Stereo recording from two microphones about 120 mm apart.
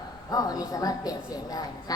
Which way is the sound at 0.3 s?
30° left (ahead or behind).